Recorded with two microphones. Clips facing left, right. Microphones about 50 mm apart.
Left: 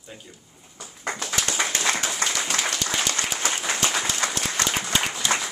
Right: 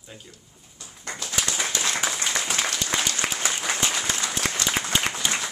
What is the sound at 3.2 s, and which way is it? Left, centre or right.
Applause, right.